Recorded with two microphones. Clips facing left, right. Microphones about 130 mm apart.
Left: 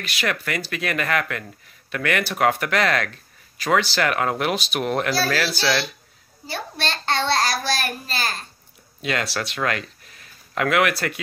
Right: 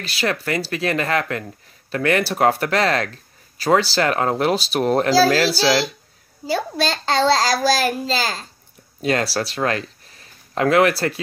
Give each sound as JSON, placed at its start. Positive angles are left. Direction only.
{"t": 0.0, "sound": "speech", "side_deg": -30}
{"t": 6.5, "sound": "a child's voice", "side_deg": -90}
{"t": 9.0, "sound": "speech", "side_deg": -35}